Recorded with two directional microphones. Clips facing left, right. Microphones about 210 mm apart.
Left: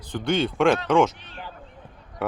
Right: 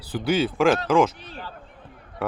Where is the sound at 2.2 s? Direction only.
Centre (ahead or behind).